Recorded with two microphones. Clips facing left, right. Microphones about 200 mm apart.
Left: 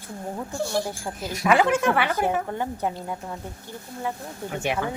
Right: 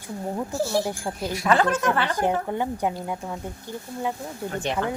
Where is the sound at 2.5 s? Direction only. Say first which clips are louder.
Right 2 dB; 15° right (ahead or behind).